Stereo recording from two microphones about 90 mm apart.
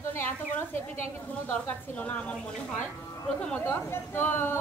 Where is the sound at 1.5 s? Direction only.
15° left (ahead or behind).